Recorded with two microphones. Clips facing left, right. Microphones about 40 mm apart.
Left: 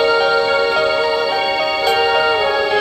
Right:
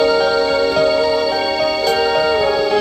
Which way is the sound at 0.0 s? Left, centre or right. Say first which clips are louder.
Even; left.